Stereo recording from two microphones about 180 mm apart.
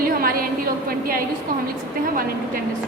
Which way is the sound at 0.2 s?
55° right (ahead or behind).